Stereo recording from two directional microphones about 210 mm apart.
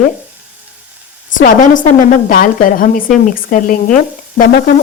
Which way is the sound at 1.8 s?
40° left (ahead or behind).